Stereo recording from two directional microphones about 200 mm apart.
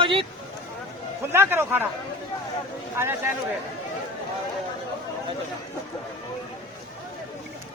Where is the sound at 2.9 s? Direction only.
10° right (ahead or behind).